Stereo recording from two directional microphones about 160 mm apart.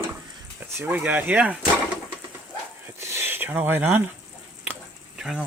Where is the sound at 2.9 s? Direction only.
15° right (ahead or behind).